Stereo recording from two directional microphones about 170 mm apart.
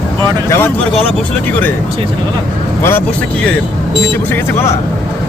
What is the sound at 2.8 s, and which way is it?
Speech, 10° left (ahead or behind).